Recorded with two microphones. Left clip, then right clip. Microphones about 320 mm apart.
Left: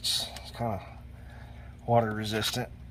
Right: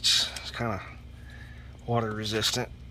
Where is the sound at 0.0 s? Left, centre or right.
Centre.